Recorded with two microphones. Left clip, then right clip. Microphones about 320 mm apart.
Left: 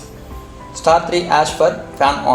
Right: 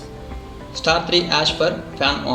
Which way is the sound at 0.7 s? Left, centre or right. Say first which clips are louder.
Left 4 dB; left.